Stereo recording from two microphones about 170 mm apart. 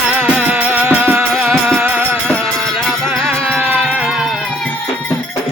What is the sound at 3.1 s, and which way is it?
Music, 5° right (ahead or behind).